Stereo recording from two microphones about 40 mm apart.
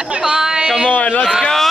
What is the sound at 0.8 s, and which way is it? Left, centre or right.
Speech, left.